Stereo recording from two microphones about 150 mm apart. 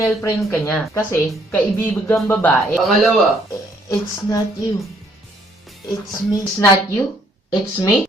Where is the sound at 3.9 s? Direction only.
25° left (ahead or behind).